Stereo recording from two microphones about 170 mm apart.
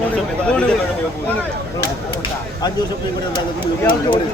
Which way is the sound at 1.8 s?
25° left (ahead or behind).